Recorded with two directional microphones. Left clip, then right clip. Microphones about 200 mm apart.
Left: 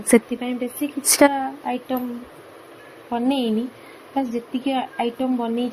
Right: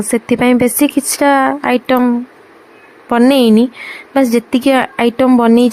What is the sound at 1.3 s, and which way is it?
Speech, 45° right (ahead or behind).